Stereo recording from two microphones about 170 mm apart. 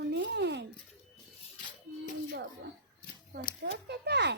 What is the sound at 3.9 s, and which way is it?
Speech, 80° right.